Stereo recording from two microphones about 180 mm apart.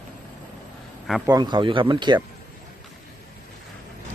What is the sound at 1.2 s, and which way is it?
Speech, 25° right (ahead or behind).